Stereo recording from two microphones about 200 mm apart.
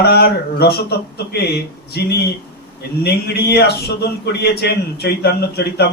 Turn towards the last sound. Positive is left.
turn(degrees=55)  # may be behind; listen again after turning